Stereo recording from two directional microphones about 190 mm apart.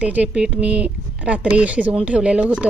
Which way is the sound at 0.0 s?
5° right (ahead or behind).